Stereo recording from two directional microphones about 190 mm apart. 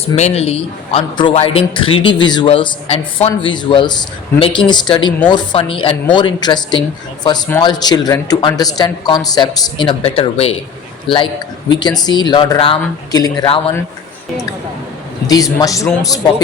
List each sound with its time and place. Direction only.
0.0 s speech: 35° left (ahead or behind)
15.3 s a man's voice: 20° left (ahead or behind)